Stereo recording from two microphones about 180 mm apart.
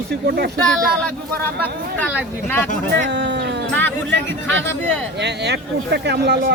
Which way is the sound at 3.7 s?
10° left (ahead or behind).